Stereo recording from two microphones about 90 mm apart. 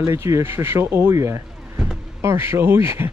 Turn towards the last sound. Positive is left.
turn(degrees=-30)  # may be behind; listen again after turning